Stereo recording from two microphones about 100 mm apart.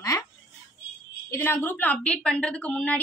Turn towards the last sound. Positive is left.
turn(degrees=15)  # may be behind; listen again after turning